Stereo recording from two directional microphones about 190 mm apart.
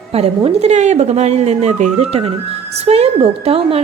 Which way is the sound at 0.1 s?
35° right (ahead or behind).